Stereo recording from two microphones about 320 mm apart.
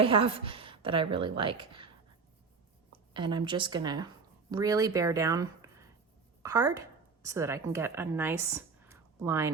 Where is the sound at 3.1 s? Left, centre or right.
Centre.